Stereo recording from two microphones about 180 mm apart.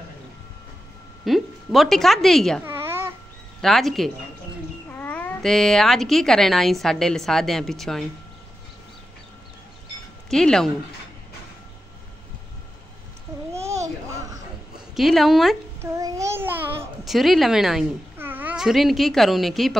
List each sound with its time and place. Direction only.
1.2 s speech: centre (ahead or behind)
2.6 s babbling: 15° right (ahead or behind)
3.6 s speech: centre (ahead or behind)
10.3 s speech: 5° left (ahead or behind)
13.5 s a sound: 15° right (ahead or behind)
15.0 s speech: centre (ahead or behind)
15.8 s child singing: 15° right (ahead or behind)
17.0 s speech: centre (ahead or behind)